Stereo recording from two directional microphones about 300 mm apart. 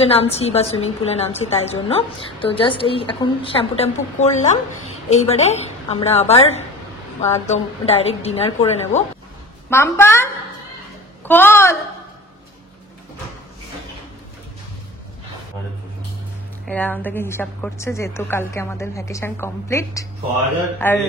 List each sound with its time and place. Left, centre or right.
0.0 s a woman's voice: centre
9.7 s a woman's voice: centre
16.6 s a woman's voice: centre